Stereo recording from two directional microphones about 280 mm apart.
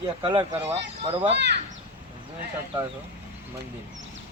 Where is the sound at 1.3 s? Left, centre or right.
Right.